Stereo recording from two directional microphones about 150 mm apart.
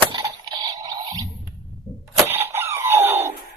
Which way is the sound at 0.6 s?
25° right (ahead or behind).